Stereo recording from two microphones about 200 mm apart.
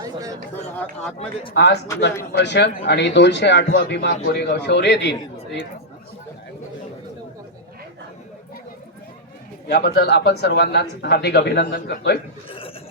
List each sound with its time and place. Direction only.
0.0 s chatter: 15° right (ahead or behind)
1.5 s a man's voice: 60° left (ahead or behind)
9.6 s a man's voice: 55° left (ahead or behind)
12.5 s a sound: 25° left (ahead or behind)